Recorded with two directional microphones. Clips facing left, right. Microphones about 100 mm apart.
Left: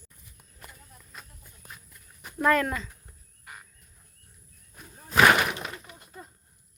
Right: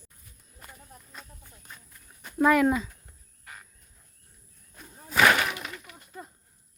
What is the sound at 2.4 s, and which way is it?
Speech, 10° right (ahead or behind).